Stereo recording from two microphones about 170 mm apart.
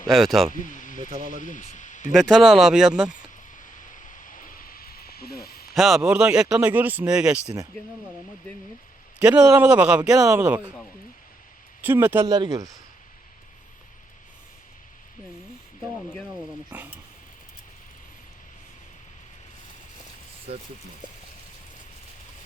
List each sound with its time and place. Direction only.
0.1 s speech: centre (ahead or behind)
0.5 s speech: 50° left (ahead or behind)
2.1 s speech: centre (ahead or behind)
3.9 s snake: 50° left (ahead or behind)
5.7 s speech: centre (ahead or behind)
9.1 s a man's voice: 5° right (ahead or behind)
11.8 s a man's voice: 10° right (ahead or behind)
12.2 s speech: 25° right (ahead or behind)
16.7 s a sound: 5° right (ahead or behind)